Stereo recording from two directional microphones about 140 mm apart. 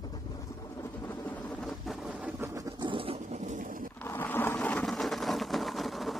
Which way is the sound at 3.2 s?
60° right (ahead or behind).